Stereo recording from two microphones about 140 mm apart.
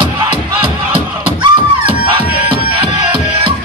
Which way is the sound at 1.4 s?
35° right (ahead or behind).